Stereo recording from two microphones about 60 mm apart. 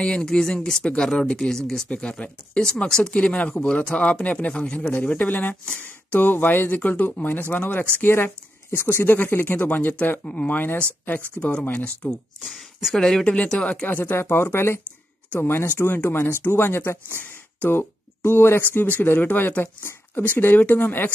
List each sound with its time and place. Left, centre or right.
0.0 s speech: centre; by 10.2 s left
10.2 s speech: centre
10.5 s speech: left
12.4 s speech: centre
13.2 s speech: centre
13.8 s speech: left
14.1 s speech: left